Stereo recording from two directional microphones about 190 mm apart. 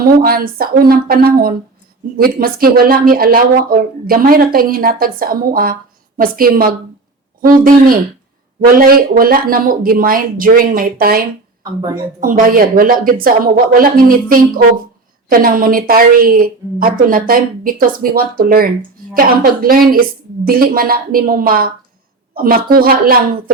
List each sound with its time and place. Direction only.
0.0 s a woman's voice: 50° right (ahead or behind)
8.7 s a woman's voice: 50° right (ahead or behind)